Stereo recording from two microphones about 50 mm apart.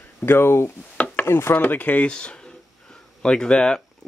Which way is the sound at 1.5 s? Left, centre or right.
Left.